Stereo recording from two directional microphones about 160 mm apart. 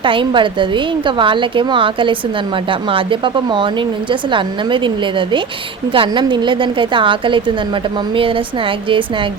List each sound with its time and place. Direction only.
0.0 s a woman's voice: 30° right (ahead or behind)
5.9 s a woman's voice: 30° right (ahead or behind)